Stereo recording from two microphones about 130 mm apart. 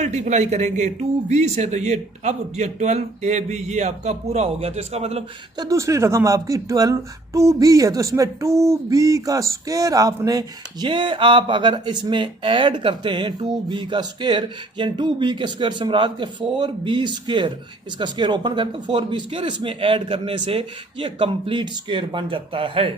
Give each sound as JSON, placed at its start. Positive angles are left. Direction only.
{"t": 0.0, "sound": "a man's voice", "side_deg": -60}
{"t": 5.5, "sound": "speech", "side_deg": -25}